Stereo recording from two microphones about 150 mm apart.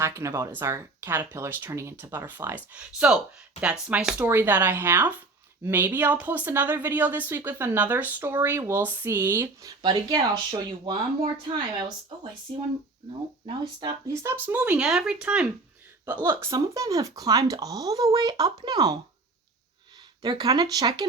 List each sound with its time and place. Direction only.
0.0 s speech: 20° right (ahead or behind)
13.4 s speech: 30° right (ahead or behind)
14.1 s speech: 15° right (ahead or behind)
20.2 s speech: 25° right (ahead or behind)